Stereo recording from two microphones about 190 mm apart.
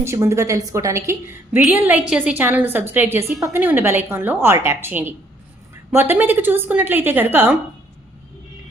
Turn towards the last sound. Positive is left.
turn(degrees=-10)  # may be behind; listen again after turning